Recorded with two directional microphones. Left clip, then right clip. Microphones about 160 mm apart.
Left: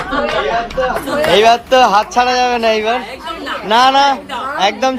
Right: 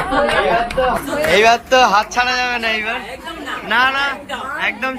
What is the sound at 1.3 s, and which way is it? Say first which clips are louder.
A man's voice: left 2 dB; 10° left (ahead or behind).